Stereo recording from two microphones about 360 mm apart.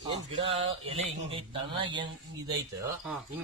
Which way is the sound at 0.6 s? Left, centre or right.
Centre.